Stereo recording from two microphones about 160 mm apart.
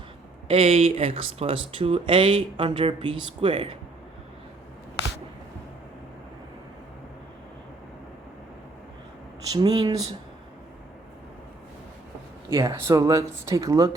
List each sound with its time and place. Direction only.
0.4 s speech: 40° right (ahead or behind)
9.5 s speech: 25° right (ahead or behind)
12.5 s speech: 20° right (ahead or behind)